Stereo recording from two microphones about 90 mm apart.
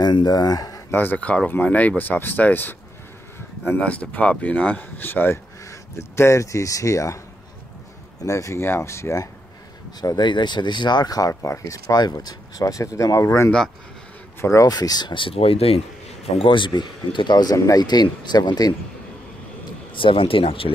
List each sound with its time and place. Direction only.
0.0 s speech: 50° left (ahead or behind)
0.9 s speech: 20° left (ahead or behind); by 7.2 s 35° left (ahead or behind)
8.2 s speech: 35° left (ahead or behind)
9.9 s speech: 50° left (ahead or behind)
12.0 s speech: 50° left (ahead or behind)
14.7 s speech: 50° left (ahead or behind); by 15.8 s 90° left
16.3 s speech: 65° left (ahead or behind)
17.6 s speech: 40° left (ahead or behind)
17.8 s speech: 55° left (ahead or behind)
19.9 s speech: 70° left (ahead or behind); by 20.7 s 90° left